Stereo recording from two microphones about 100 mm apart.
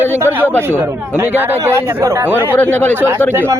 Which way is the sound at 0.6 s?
20° right (ahead or behind).